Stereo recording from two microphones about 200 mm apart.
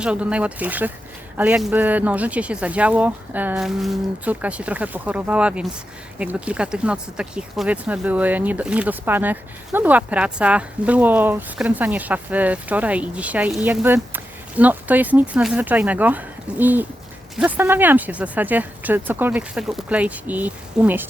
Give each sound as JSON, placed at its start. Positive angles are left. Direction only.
{"t": 0.0, "sound": "speech", "side_deg": -5}